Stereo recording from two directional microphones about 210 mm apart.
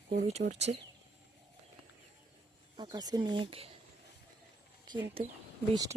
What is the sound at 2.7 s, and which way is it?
Speech, 20° right (ahead or behind).